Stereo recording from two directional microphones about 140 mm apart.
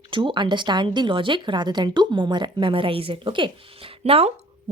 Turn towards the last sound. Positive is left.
turn(degrees=-45)  # may be behind; listen again after turning